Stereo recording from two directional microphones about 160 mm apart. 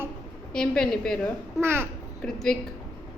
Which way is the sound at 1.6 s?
15° right (ahead or behind).